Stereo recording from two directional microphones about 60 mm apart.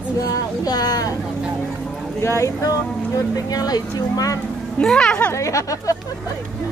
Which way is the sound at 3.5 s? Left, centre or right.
Left.